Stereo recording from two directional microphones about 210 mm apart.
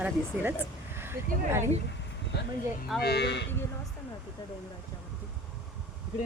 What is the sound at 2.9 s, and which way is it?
Speech, 50° left (ahead or behind).